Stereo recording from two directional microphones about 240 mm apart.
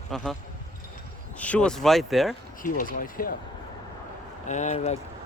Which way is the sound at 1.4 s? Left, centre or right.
Centre.